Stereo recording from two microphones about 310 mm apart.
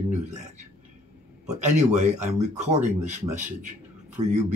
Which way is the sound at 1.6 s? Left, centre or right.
Right.